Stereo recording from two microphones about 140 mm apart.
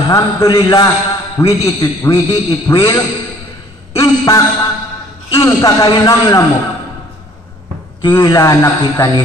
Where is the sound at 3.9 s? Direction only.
20° left (ahead or behind).